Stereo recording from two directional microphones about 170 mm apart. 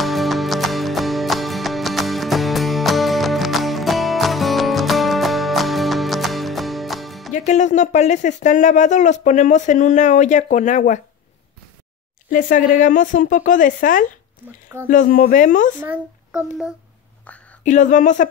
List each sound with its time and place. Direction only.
0.0 s music: centre (ahead or behind)
7.3 s speech: 45° left (ahead or behind)
12.3 s speech: 50° left (ahead or behind)
15.8 s a child's voice: 5° right (ahead or behind)
17.3 s a sound: 10° left (ahead or behind)
17.6 s speech: 45° left (ahead or behind)